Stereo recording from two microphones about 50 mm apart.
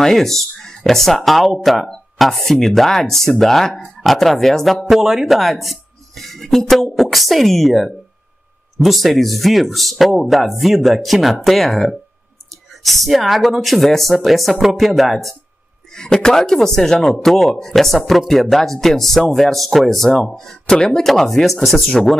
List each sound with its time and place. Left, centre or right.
0.0 s speech: centre
4.8 s speech: centre
15.9 s speech: centre